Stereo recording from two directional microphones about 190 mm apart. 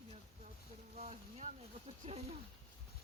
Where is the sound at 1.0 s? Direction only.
35° right (ahead or behind).